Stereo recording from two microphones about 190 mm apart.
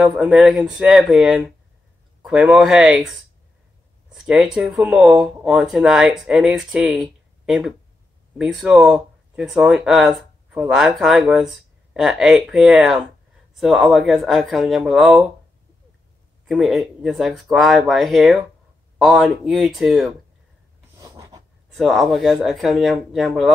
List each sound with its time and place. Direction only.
0.0 s speech: 5° right (ahead or behind)
16.4 s speech: centre (ahead or behind)
21.0 s a sound: 20° right (ahead or behind)
21.6 s speech: centre (ahead or behind)